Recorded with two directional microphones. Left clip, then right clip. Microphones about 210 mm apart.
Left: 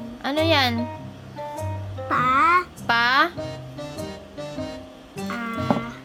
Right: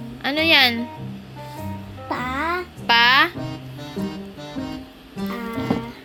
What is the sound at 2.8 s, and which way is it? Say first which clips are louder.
Music: right 8 dB; 15° left (ahead or behind).